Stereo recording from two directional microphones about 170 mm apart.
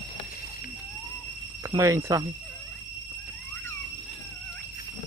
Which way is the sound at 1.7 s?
20° right (ahead or behind).